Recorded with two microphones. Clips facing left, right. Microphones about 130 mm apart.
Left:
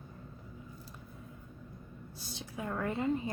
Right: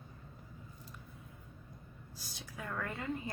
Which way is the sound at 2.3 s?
25° left (ahead or behind).